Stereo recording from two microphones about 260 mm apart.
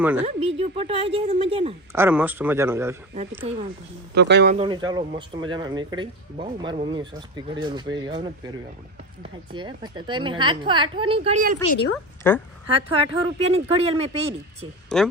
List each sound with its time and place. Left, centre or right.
0.0 s speech: centre
0.3 s a woman's voice: right
2.0 s speech: centre
3.2 s a woman's voice: right
4.1 s speech: right
4.5 s speech: centre
9.5 s a woman's voice: centre
12.2 s a woman's voice: centre
13.0 s a woman's voice: right
14.9 s speech: centre